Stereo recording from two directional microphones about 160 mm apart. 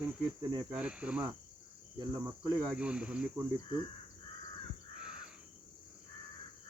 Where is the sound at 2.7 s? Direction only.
5° right (ahead or behind).